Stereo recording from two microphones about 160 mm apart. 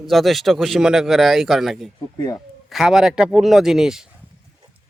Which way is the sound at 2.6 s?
5° right (ahead or behind).